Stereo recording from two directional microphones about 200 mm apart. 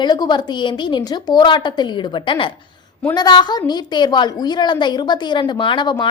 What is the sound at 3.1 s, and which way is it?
A woman's voice, 20° left (ahead or behind).